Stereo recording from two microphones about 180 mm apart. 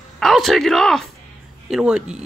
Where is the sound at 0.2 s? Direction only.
Centre (ahead or behind).